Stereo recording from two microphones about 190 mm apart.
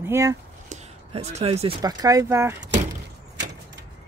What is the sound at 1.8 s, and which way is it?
Speech, 20° right (ahead or behind).